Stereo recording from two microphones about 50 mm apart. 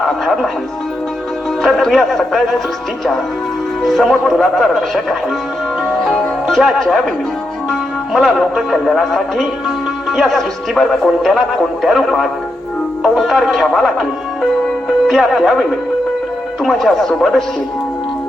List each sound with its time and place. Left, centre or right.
0.0 s speech: centre
1.6 s speech: centre
3.8 s speech: centre
6.5 s speech: centre
14.8 s music: centre
16.6 s speech: centre